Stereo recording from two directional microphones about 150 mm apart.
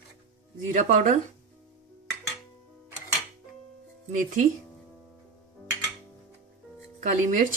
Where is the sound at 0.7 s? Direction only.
55° right (ahead or behind).